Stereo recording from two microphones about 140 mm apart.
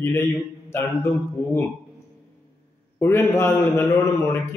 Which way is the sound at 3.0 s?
15° left (ahead or behind).